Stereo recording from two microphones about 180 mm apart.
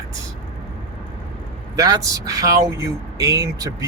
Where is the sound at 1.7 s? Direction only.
20° right (ahead or behind).